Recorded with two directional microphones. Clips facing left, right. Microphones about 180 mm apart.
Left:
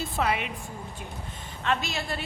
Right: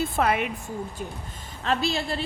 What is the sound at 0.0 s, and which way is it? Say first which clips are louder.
Speech: right 4 dB; 50° right (ahead or behind).